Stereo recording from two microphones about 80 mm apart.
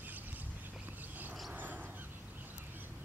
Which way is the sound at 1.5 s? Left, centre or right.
Right.